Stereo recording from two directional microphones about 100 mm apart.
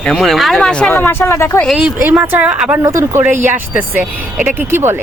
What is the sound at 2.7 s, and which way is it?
Speech, 25° right (ahead or behind).